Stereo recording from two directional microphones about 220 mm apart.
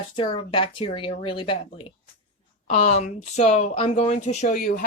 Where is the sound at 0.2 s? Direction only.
25° left (ahead or behind).